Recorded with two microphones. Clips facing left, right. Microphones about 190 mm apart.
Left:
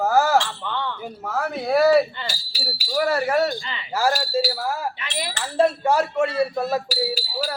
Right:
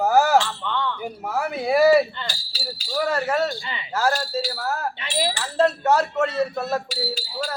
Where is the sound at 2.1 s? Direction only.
10° left (ahead or behind).